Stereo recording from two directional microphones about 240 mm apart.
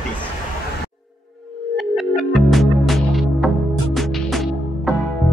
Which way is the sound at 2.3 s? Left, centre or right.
Centre.